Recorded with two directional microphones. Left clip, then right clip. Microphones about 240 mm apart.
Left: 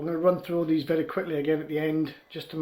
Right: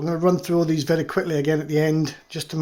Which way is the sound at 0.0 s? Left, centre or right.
Right.